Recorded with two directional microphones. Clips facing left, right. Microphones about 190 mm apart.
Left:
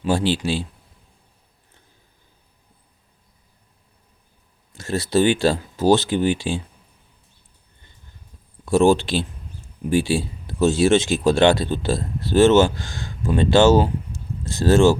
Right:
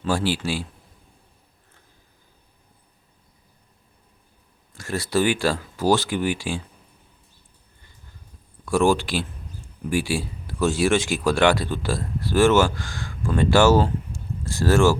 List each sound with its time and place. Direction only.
0.0 s speech: 20° left (ahead or behind)
4.7 s speech: 25° left (ahead or behind)
8.6 s speech: 25° left (ahead or behind)